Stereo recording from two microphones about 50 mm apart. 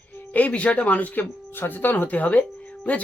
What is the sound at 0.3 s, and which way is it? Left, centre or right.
Speech, left.